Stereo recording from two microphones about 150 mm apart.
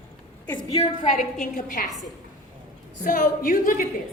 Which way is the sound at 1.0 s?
65° left (ahead or behind).